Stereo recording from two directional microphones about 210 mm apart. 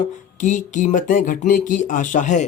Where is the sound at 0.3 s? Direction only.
35° left (ahead or behind).